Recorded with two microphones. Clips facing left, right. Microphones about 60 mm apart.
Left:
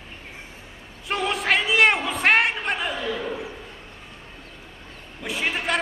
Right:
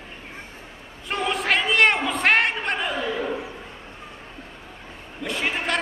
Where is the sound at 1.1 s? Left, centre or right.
Centre.